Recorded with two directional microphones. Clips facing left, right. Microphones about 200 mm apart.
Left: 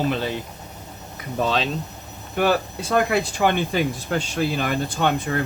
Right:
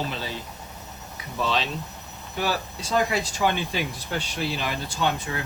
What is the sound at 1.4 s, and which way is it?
Speech, 50° left (ahead or behind).